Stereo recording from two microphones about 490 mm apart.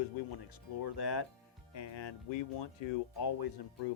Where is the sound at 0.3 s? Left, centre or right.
Left.